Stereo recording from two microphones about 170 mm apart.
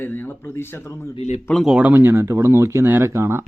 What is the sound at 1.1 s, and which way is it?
Speech, 40° left (ahead or behind).